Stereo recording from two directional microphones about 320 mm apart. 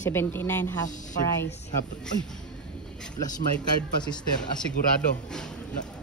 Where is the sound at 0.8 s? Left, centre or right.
Left.